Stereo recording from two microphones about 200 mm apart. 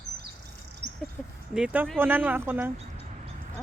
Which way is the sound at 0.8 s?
60° right (ahead or behind).